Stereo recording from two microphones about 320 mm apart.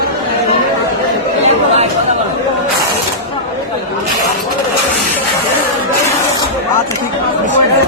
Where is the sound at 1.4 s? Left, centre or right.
Centre.